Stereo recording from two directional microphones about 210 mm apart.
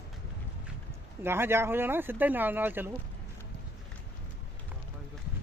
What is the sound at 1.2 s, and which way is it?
Speech, 10° right (ahead or behind).